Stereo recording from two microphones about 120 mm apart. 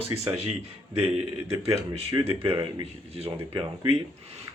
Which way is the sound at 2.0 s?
55° right (ahead or behind).